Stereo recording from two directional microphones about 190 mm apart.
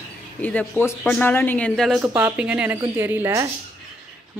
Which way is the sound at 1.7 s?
5° right (ahead or behind).